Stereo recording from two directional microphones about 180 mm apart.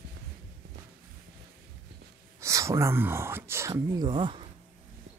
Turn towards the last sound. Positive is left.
turn(degrees=-25)  # may be behind; listen again after turning